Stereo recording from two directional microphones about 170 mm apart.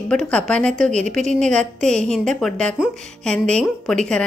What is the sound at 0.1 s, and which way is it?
A woman's voice, 5° left (ahead or behind).